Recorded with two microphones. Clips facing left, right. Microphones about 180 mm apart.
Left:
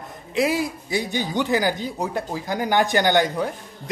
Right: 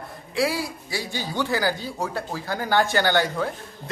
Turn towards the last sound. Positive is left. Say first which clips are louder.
# left 2 dB
turn(degrees=15)  # may be behind; listen again after turning